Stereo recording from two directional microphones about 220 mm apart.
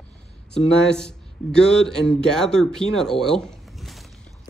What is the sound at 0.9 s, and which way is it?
Speech, 5° left (ahead or behind).